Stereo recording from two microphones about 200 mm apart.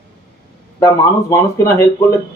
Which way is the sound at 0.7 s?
15° left (ahead or behind).